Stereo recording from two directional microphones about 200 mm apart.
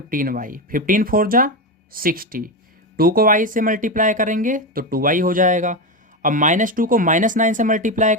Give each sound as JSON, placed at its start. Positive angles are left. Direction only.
{"t": 0.1, "sound": "speech", "side_deg": -45}